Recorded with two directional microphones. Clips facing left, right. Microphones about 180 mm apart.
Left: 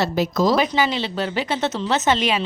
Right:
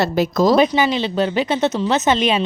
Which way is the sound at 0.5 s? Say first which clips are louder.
Right 5 dB; 20° right (ahead or behind).